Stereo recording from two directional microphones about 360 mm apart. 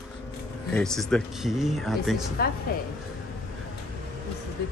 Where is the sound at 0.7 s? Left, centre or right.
Centre.